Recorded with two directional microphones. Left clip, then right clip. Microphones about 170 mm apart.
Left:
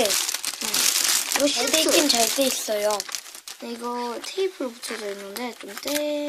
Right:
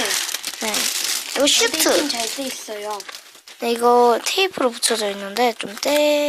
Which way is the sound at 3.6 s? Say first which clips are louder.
Right 16 dB; 45° right (ahead or behind).